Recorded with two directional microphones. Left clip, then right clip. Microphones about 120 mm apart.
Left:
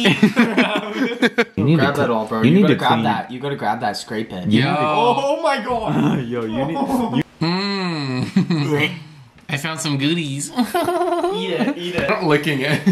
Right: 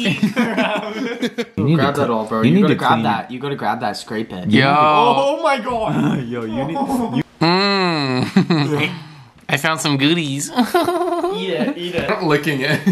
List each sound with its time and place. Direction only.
0.1 s chuckle: 15° left (ahead or behind)
1.8 s speech: 15° right (ahead or behind)
2.4 s a man's voice: 15° left (ahead or behind)
2.8 s speech: 15° right (ahead or behind)
5.9 s a man's voice: 10° left (ahead or behind)
7.3 s a sound: 20° right (ahead or behind)
9.5 s speech: 20° right (ahead or behind)
11.3 s speech: 20° right (ahead or behind)
11.6 s a man's voice: 15° left (ahead or behind)
12.3 s speech: 10° right (ahead or behind)